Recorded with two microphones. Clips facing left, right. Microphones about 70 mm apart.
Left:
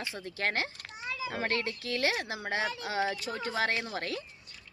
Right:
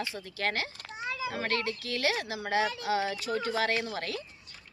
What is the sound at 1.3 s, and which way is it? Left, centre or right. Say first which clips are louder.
A woman's voice: left 1 dB; left.